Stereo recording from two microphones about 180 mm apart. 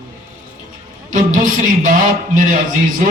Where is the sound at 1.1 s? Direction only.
45° right (ahead or behind).